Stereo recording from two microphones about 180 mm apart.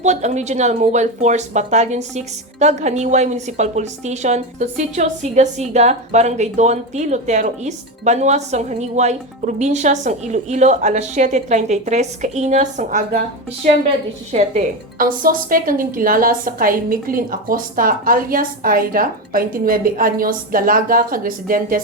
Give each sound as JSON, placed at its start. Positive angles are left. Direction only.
{"t": 0.0, "sound": "a woman's voice", "side_deg": -40}